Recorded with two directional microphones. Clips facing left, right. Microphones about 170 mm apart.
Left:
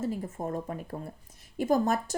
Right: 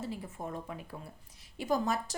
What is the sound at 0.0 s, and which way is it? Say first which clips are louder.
Speech: left 7 dB; 45° left (ahead or behind).